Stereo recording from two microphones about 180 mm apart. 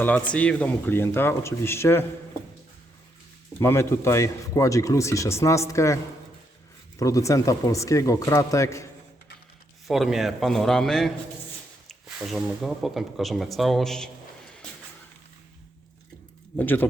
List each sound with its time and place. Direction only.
0.3 s speech: 5° left (ahead or behind)
3.6 s speech: 15° left (ahead or behind)
7.0 s speech: 15° left (ahead or behind)
9.8 s speech: centre (ahead or behind)
16.6 s speech: 10° left (ahead or behind)